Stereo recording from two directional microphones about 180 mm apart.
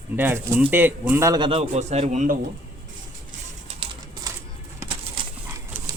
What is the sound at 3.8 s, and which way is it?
Bird, 25° right (ahead or behind).